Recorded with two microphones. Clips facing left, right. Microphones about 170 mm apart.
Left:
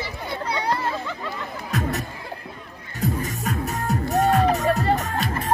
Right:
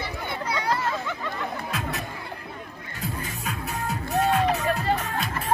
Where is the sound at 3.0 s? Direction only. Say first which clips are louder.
Left 7 dB; 40° left (ahead or behind).